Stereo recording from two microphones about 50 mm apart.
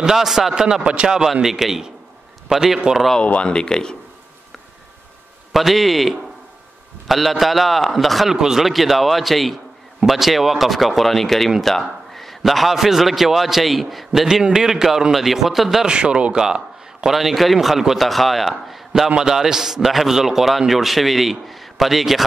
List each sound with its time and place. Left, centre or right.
0.0 s a man's voice: centre
3.2 s speech: left
5.5 s a man's voice: centre
14.2 s a man's voice: centre
15.9 s a man's voice: centre
19.0 s a man's voice: centre